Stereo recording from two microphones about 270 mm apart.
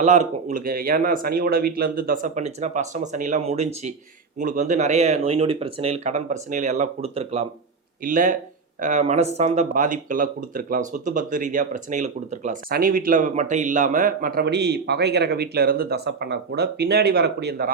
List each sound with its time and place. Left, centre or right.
0.0 s speech: right